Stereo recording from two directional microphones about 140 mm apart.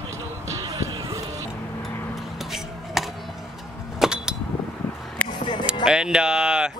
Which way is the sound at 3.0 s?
Centre (ahead or behind).